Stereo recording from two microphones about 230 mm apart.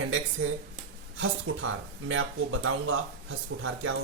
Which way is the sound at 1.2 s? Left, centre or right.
Right.